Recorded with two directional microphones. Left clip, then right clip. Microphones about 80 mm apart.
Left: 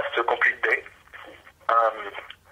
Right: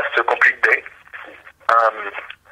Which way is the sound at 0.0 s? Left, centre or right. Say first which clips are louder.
Right 7 dB; right.